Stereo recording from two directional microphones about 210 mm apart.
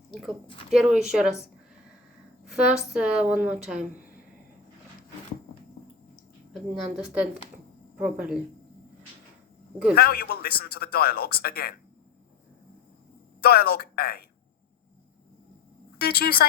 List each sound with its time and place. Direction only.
0.1 s a woman's voice: centre (ahead or behind)
2.4 s a woman's voice: 5° right (ahead or behind)
6.5 s a woman's voice: 5° right (ahead or behind)
9.9 s a man's voice: 45° left (ahead or behind)
13.4 s a man's voice: 50° left (ahead or behind)
16.0 s a man's voice: 45° left (ahead or behind)